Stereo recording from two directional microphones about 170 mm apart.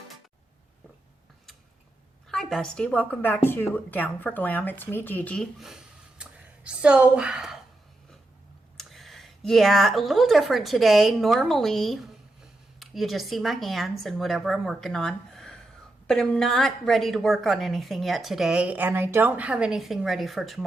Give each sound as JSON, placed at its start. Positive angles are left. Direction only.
{"t": 2.3, "sound": "a woman's voice", "side_deg": 5}
{"t": 8.8, "sound": "a woman's voice", "side_deg": 0}